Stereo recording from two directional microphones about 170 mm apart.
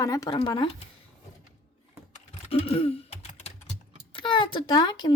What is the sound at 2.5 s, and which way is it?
Throat clearing, 35° left (ahead or behind).